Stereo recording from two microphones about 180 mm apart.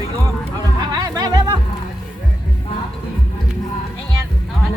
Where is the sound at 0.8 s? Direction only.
20° right (ahead or behind).